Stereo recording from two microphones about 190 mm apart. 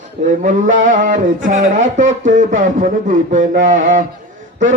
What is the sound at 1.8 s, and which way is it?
Speech, 40° right (ahead or behind).